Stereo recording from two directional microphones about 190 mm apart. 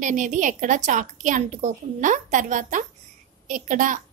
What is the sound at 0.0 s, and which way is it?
A woman's voice, 40° right (ahead or behind).